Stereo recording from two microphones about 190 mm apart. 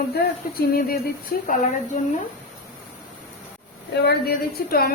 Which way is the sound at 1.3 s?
50° left (ahead or behind).